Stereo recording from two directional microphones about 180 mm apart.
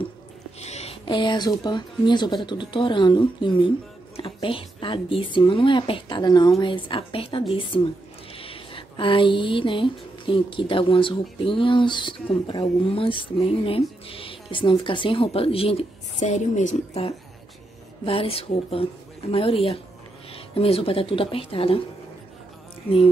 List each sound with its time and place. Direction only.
0.6 s speech: 35° left (ahead or behind)